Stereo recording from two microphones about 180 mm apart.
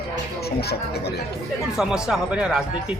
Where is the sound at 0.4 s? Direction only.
65° left (ahead or behind).